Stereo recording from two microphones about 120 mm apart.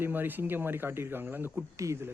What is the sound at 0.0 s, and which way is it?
A man's voice, 15° right (ahead or behind).